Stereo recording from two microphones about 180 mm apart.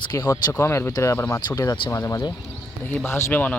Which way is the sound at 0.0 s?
20° left (ahead or behind).